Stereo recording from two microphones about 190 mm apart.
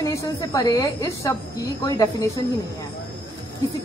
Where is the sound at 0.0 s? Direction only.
20° left (ahead or behind).